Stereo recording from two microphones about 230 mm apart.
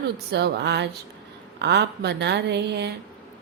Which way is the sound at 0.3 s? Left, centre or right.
Right.